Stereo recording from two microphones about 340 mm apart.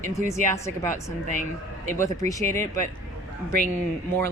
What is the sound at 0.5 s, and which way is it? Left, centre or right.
Speech, centre.